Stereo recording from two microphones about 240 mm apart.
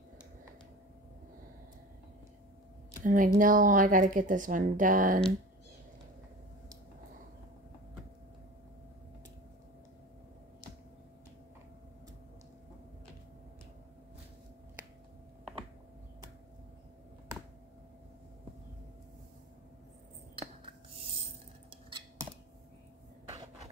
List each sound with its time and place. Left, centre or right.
3.0 s speech: right